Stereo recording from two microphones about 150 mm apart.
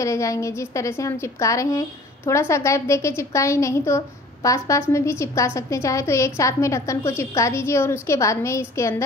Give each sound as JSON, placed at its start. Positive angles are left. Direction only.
{"t": 0.0, "sound": "a woman's voice", "side_deg": 20}